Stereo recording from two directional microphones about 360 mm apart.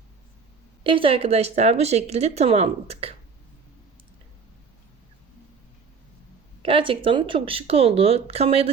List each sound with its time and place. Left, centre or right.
0.9 s speech: centre
6.6 s speech: centre